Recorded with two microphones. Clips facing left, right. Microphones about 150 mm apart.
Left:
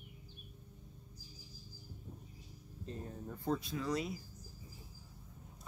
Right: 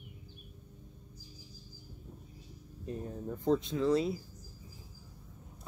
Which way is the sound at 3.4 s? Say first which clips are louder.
Right 8 dB; 20° right (ahead or behind).